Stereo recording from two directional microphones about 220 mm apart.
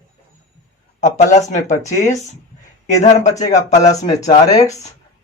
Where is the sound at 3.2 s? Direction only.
15° left (ahead or behind).